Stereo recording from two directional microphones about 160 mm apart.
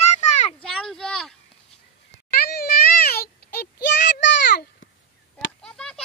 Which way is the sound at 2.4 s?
75° left (ahead or behind).